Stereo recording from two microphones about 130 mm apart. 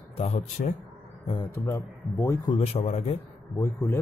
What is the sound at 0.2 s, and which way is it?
Speech, 60° left (ahead or behind).